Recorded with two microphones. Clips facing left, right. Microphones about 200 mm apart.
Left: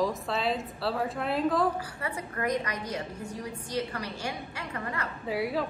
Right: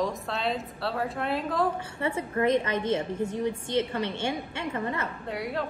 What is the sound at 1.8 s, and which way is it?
A woman's voice, 25° right (ahead or behind).